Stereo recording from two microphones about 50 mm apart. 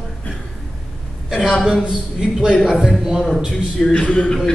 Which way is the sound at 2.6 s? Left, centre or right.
Centre.